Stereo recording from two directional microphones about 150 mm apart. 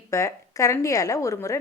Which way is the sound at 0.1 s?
20° left (ahead or behind).